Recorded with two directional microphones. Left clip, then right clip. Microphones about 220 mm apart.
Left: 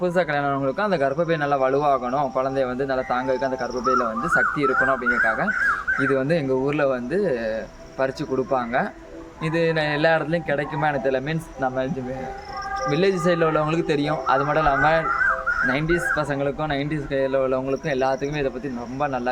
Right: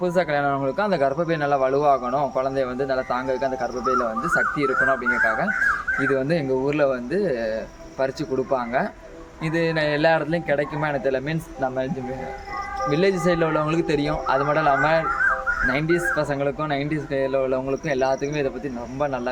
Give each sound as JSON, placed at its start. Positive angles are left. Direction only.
{"t": 0.0, "sound": "speech", "side_deg": 0}
{"t": 12.9, "sound": "speech", "side_deg": 5}